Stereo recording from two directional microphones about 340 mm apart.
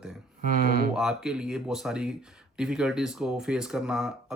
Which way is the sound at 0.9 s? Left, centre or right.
Centre.